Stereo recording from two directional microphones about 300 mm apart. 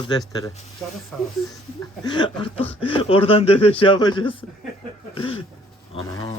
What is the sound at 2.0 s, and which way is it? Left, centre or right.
Speech, centre.